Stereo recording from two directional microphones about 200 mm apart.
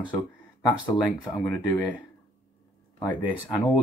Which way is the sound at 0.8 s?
10° left (ahead or behind).